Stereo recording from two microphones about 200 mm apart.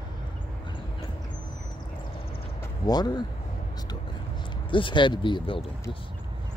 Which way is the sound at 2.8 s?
20° left (ahead or behind).